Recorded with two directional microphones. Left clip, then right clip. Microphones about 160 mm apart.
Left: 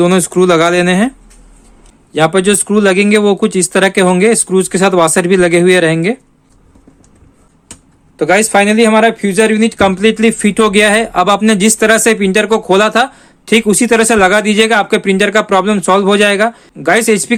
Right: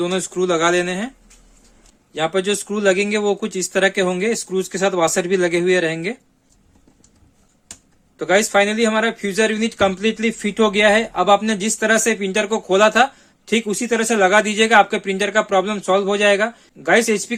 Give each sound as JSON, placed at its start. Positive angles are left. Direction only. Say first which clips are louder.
{"t": 0.0, "sound": "speech", "louder": "left 11 dB", "side_deg": 40}
{"t": 2.1, "sound": "speech", "louder": "left 9 dB", "side_deg": 30}
{"t": 8.2, "sound": "speech", "louder": "left 6 dB", "side_deg": 25}